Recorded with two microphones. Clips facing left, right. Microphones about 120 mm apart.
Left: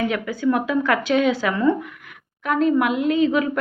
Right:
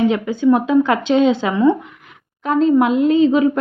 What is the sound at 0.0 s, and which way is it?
A woman's voice, 20° right (ahead or behind).